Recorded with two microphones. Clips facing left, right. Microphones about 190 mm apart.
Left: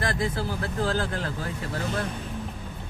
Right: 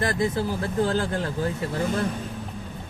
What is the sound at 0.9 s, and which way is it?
Speech, 25° right (ahead or behind).